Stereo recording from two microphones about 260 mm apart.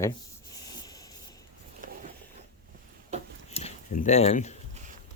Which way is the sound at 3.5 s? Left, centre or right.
Left.